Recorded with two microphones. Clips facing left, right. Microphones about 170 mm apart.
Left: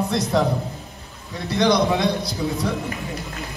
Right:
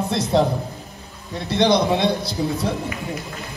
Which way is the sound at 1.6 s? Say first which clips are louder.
Right 1 dB; 25° right (ahead or behind).